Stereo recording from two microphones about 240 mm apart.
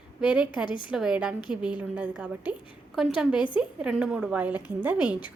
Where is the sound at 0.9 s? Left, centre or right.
Centre.